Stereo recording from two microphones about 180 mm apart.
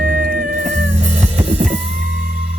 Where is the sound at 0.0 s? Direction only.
50° right (ahead or behind).